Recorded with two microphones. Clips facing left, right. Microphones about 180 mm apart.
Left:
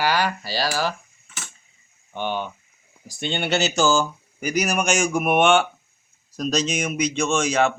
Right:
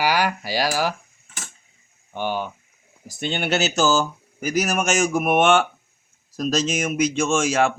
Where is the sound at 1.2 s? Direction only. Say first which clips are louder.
Even; 40° right (ahead or behind).